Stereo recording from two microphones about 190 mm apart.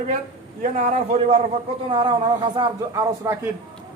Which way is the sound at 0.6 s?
40° right (ahead or behind).